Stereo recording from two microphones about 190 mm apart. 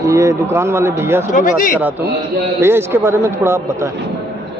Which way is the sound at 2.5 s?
10° right (ahead or behind).